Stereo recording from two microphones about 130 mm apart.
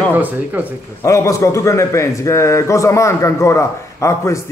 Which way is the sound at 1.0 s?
25° left (ahead or behind).